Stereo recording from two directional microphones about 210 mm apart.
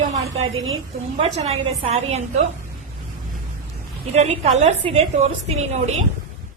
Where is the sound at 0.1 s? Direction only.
30° right (ahead or behind).